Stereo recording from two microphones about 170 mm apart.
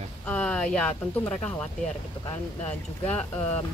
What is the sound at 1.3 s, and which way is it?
Speech, 10° left (ahead or behind).